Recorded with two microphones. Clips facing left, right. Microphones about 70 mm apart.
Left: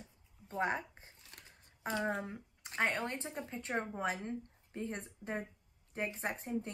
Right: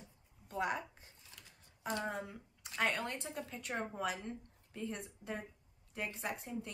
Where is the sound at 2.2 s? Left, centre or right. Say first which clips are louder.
Left 4 dB; left.